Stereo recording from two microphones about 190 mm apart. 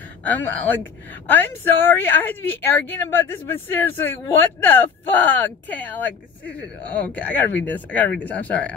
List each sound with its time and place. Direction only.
0.2 s speech: 10° left (ahead or behind)